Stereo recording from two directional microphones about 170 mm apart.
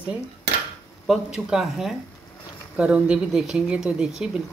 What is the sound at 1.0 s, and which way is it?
Speech, centre (ahead or behind).